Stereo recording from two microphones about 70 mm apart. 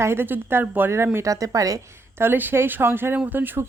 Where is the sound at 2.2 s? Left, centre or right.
Right.